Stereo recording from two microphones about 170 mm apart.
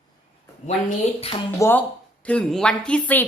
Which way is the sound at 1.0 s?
40° left (ahead or behind).